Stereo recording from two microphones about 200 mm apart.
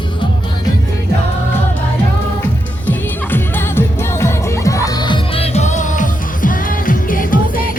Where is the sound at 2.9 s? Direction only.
10° left (ahead or behind).